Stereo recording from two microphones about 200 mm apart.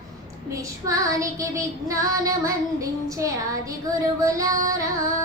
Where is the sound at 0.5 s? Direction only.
15° right (ahead or behind).